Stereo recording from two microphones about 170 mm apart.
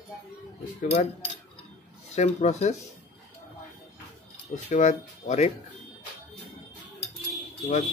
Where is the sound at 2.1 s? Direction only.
40° left (ahead or behind).